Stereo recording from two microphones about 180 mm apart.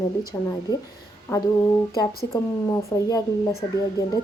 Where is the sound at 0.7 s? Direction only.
25° left (ahead or behind).